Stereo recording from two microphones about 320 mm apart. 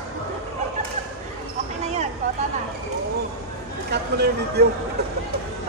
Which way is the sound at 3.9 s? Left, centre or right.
Right.